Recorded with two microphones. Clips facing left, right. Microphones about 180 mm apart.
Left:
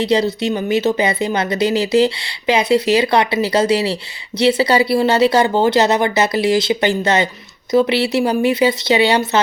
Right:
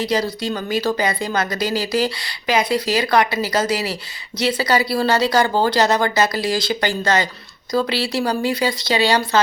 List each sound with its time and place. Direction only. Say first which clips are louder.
0.0 s speech: left 5 dB; 25° left (ahead or behind)